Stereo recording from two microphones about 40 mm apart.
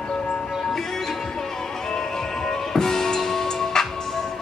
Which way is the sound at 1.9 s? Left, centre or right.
Centre.